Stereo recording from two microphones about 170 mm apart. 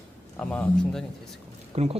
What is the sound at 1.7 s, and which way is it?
Speech, 40° right (ahead or behind).